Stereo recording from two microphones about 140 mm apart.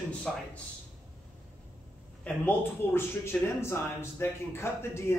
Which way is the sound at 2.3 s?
15° left (ahead or behind).